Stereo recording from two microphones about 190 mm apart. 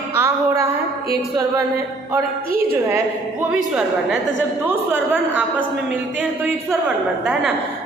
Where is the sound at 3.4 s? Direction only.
5° right (ahead or behind).